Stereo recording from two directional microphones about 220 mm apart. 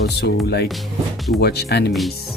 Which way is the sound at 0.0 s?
50° left (ahead or behind).